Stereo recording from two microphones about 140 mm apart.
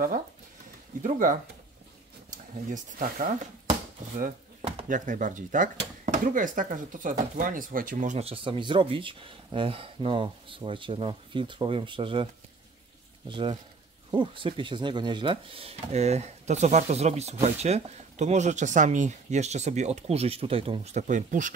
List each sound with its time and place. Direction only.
1.0 s speech: 70° right (ahead or behind)
2.7 s speech: 75° right (ahead or behind)
4.8 s speech: 70° right (ahead or behind)
8.2 s speech: 40° right (ahead or behind)
13.3 s speech: 35° right (ahead or behind); by 21.5 s 65° right (ahead or behind)